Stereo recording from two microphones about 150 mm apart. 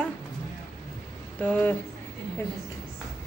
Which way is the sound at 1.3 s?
10° left (ahead or behind).